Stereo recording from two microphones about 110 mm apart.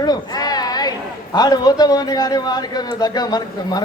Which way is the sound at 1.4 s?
35° left (ahead or behind).